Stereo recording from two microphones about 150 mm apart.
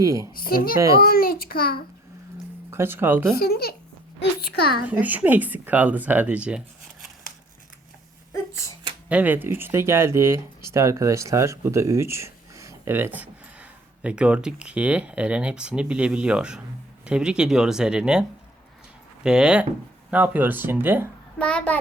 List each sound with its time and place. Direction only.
0.0 s a child's voice: 20° right (ahead or behind)
0.3 s a child's voice: 80° left
2.6 s speech: 15° right (ahead or behind)
3.3 s speech: 90° left
4.9 s speech: 10° right (ahead or behind)
9.0 s speech: 10° right (ahead or behind)
21.3 s a child's voice: 5° left (ahead or behind)